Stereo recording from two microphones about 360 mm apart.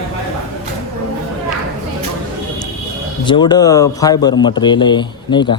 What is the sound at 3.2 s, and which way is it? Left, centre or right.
A man's voice, centre.